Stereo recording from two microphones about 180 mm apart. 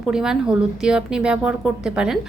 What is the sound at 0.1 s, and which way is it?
A woman's voice, 5° right (ahead or behind).